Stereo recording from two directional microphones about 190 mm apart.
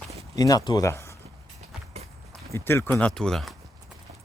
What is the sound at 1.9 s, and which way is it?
Walk, 35° right (ahead or behind).